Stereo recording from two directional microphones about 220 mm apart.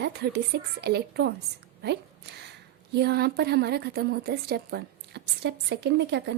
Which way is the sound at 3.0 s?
45° right (ahead or behind).